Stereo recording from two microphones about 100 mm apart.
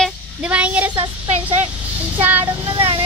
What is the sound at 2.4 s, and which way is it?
Speech, 60° right (ahead or behind).